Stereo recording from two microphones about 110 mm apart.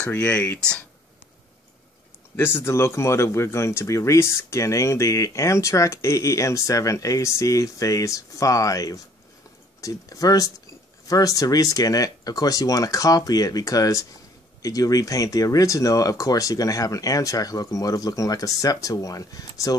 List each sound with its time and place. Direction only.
0.0 s speech: 10° left (ahead or behind)
2.3 s speech: 20° left (ahead or behind)